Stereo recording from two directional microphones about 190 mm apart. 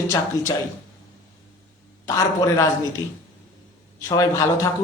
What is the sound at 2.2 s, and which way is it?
Speech, 15° left (ahead or behind).